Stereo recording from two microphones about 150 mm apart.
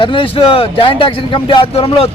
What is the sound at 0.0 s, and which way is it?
A man's voice, 35° left (ahead or behind).